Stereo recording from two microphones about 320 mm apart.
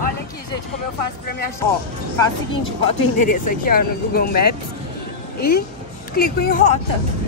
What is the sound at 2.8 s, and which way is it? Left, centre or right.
Speech, left.